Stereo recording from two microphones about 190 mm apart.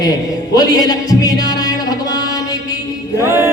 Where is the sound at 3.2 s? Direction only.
15° right (ahead or behind).